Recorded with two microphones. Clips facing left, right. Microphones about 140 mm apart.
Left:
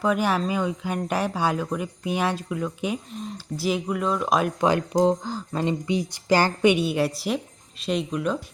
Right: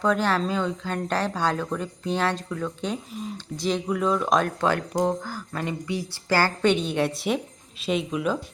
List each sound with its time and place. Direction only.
0.0 s speech: 10° left (ahead or behind)
3.1 s speech: 5° right (ahead or behind)
3.3 s speech: 5° left (ahead or behind)
4.6 s speech: 15° left (ahead or behind); by 8.4 s centre (ahead or behind)